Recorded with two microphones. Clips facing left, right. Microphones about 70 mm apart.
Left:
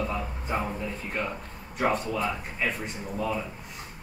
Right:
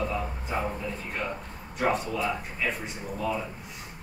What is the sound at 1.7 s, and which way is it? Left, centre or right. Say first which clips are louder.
Speech: even; centre.